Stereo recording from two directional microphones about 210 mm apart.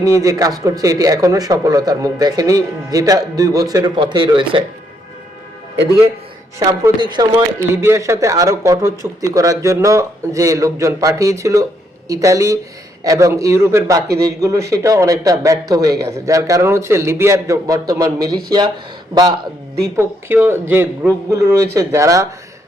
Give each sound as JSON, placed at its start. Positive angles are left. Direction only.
{"t": 0.0, "sound": "speech", "side_deg": -15}
{"t": 6.6, "sound": "speech", "side_deg": -20}
{"t": 20.0, "sound": "speech", "side_deg": -10}